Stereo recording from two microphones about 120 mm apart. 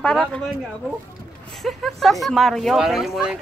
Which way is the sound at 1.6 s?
Centre (ahead or behind).